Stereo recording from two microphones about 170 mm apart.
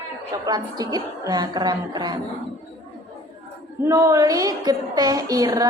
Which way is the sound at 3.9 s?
20° right (ahead or behind).